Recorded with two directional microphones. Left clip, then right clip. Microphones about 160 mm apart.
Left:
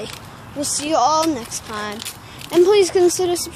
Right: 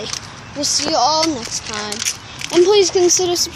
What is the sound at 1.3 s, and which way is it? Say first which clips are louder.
Speech: right 1 dB; centre (ahead or behind).